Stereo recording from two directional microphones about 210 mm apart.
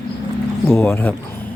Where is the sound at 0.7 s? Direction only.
10° left (ahead or behind).